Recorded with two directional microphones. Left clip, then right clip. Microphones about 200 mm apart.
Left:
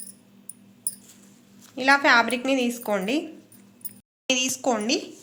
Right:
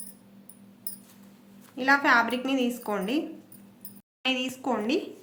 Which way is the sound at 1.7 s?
35° left (ahead or behind).